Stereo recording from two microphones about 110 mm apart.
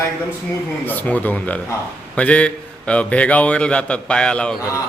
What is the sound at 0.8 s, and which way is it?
A man's voice, 15° left (ahead or behind).